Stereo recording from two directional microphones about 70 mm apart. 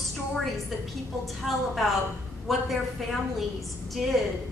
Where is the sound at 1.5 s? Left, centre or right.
Centre.